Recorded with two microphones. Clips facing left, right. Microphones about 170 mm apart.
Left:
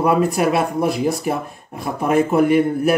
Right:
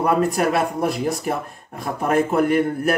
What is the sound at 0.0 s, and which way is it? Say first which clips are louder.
A man's voice: left 2 dB; 5° left (ahead or behind).